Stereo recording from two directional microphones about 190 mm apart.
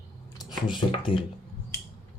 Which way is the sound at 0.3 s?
20° left (ahead or behind).